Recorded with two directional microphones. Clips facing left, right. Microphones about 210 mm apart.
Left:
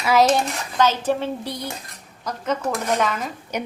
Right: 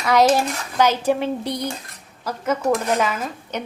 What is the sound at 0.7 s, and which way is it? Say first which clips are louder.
Speech: right 2 dB; 10° right (ahead or behind).